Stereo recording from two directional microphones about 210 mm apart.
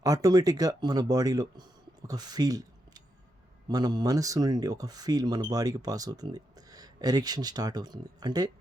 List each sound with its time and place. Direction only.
0.0 s speech: 15° right (ahead or behind)